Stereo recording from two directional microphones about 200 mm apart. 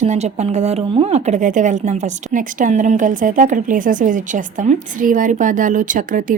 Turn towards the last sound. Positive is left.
turn(degrees=-40)  # may be behind; listen again after turning